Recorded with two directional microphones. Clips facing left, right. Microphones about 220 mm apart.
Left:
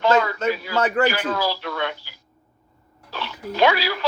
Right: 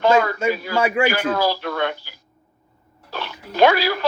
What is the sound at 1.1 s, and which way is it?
Speech, 50° right (ahead or behind).